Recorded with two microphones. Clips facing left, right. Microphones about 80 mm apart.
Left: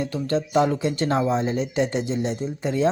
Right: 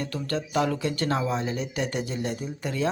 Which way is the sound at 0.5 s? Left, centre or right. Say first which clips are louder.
Left 4 dB; left.